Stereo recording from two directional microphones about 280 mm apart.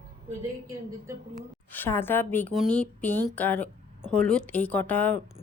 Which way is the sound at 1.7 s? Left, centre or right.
Centre.